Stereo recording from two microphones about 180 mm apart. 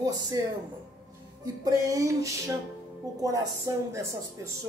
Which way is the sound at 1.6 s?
15° right (ahead or behind).